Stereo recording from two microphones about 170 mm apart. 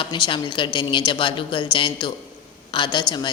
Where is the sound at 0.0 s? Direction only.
30° left (ahead or behind).